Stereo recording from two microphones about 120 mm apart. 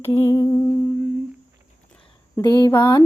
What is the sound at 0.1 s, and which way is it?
Humming, 25° left (ahead or behind).